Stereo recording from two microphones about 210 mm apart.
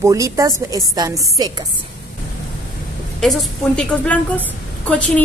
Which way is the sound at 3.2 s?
Centre (ahead or behind).